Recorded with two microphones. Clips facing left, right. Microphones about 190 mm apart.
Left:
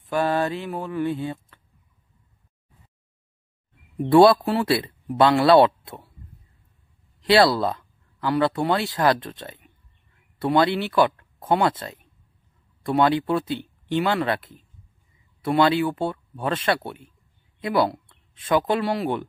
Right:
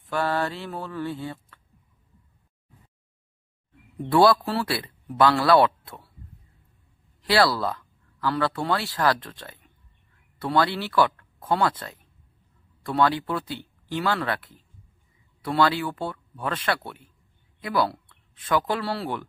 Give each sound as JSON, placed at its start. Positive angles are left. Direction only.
{"t": 0.0, "sound": "speech", "side_deg": 20}
{"t": 4.0, "sound": "speech", "side_deg": 25}
{"t": 7.2, "sound": "speech", "side_deg": 20}